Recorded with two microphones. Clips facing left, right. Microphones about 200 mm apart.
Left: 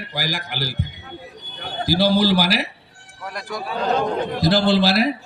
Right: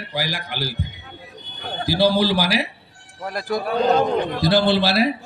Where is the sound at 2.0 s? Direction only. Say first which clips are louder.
Even; 45° left (ahead or behind).